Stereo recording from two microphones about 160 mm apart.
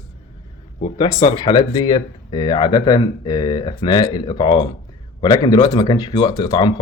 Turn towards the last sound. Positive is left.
turn(degrees=30)  # may be behind; listen again after turning